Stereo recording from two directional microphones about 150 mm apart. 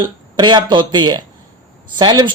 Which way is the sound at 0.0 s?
30° right (ahead or behind).